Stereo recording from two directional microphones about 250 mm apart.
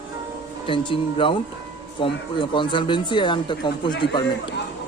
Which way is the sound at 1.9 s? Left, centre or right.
Centre.